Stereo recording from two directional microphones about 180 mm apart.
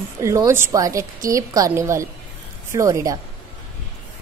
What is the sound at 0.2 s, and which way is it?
A woman's voice, 15° right (ahead or behind).